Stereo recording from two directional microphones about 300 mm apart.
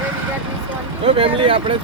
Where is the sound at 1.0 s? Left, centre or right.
Centre.